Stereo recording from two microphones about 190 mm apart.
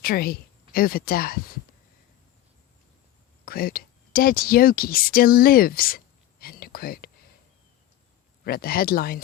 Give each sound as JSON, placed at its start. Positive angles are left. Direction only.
{"t": 0.0, "sound": "speech", "side_deg": 50}
{"t": 3.4, "sound": "speech", "side_deg": 50}
{"t": 6.4, "sound": "a sound", "side_deg": 50}
{"t": 8.4, "sound": "speech", "side_deg": 50}